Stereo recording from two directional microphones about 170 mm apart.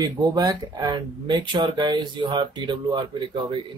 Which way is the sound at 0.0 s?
25° right (ahead or behind).